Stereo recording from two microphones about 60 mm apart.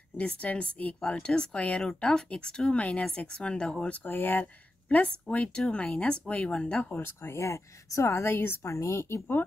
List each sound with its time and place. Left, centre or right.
0.2 s speech: left
4.0 s speech: left
4.8 s a woman's voice: left
7.0 s speech: left
8.6 s speech: left